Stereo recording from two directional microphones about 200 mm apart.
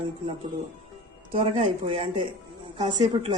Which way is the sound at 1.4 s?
30° right (ahead or behind).